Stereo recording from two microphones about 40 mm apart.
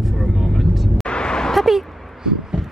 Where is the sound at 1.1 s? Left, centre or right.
Left.